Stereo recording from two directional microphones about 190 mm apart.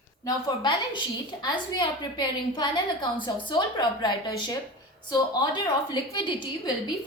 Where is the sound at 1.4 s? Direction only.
25° left (ahead or behind).